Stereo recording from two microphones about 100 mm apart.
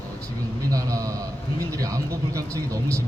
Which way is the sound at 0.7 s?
35° right (ahead or behind).